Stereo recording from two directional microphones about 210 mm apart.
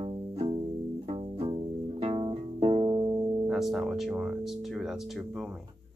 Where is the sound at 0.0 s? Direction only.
25° right (ahead or behind).